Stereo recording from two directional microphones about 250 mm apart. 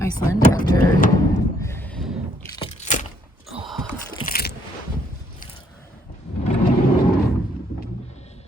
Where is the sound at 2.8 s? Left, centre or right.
Left.